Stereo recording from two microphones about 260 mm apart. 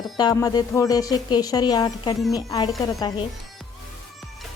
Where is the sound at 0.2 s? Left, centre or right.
Centre.